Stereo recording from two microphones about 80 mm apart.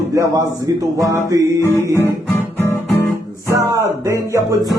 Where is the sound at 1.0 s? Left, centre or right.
Right.